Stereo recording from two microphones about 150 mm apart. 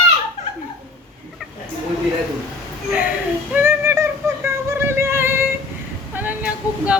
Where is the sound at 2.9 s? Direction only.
10° right (ahead or behind).